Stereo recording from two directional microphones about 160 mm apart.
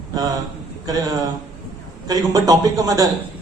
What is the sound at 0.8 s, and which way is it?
A man's voice, 20° right (ahead or behind).